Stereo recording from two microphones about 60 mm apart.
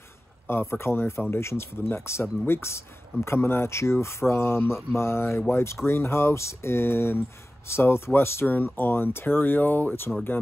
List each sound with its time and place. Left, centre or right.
0.5 s speech: left